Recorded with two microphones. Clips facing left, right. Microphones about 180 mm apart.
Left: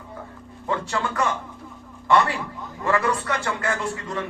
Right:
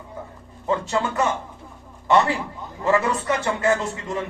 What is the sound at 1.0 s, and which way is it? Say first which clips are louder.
A man's voice: right 2 dB; 25° right (ahead or behind).